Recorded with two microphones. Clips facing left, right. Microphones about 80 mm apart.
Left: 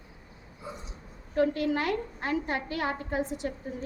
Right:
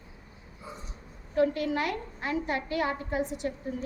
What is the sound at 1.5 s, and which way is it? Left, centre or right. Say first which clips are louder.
A woman's voice: left 2 dB; left.